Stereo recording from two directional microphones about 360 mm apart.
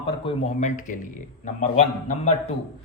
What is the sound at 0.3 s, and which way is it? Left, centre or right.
A man's voice, centre.